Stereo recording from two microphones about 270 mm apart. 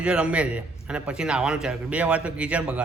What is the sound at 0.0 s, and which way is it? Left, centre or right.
A man's voice, centre.